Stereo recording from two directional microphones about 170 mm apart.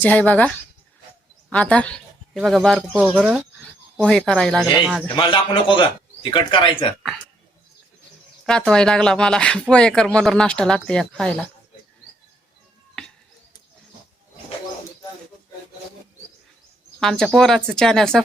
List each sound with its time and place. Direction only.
0.0 s speech: 10° left (ahead or behind)
2.3 s speech: 5° right (ahead or behind)
5.1 s a man's voice: 30° left (ahead or behind)
8.4 s speech: 5° left (ahead or behind)
17.0 s speech: centre (ahead or behind)